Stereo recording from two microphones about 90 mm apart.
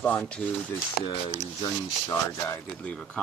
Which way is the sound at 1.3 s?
30° left (ahead or behind).